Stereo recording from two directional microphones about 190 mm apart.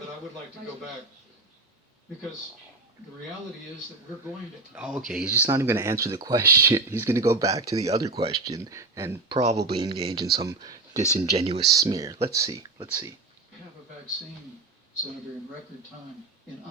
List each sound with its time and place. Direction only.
4.7 s speech: 5° right (ahead or behind)
9.3 s speech: 35° right (ahead or behind)
10.4 s speech: 20° right (ahead or behind)
10.9 s speech: 35° right (ahead or behind)
11.8 s speech: 15° right (ahead or behind)